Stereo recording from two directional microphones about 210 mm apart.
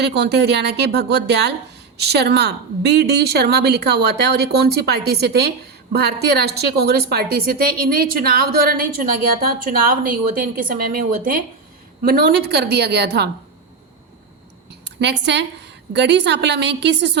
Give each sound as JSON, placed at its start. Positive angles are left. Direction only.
{"t": 0.0, "sound": "a woman's voice", "side_deg": -55}
{"t": 14.7, "sound": "a woman's voice", "side_deg": -55}